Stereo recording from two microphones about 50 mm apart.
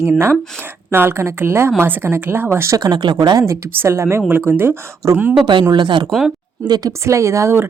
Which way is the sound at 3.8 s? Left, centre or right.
Right.